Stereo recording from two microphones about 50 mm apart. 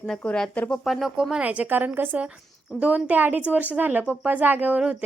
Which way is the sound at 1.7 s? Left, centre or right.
Right.